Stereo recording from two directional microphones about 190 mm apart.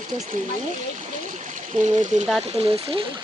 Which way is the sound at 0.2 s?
40° right (ahead or behind).